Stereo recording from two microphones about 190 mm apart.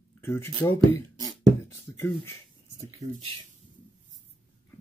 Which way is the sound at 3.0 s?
35° right (ahead or behind).